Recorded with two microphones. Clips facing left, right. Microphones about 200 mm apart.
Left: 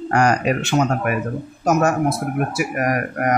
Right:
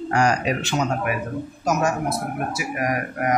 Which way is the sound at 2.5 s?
55° left (ahead or behind).